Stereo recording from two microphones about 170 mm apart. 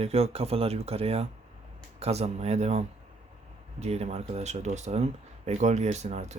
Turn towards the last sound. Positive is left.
turn(degrees=-40)  # may be behind; listen again after turning